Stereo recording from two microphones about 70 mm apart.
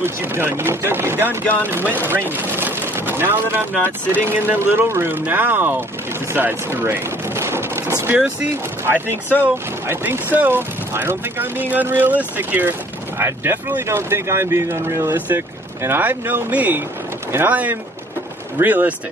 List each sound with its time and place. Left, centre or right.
0.0 s speech: right
6.3 s a sound: right
8.8 s speech: right